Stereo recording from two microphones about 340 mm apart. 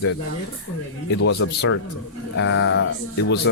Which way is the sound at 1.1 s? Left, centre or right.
Left.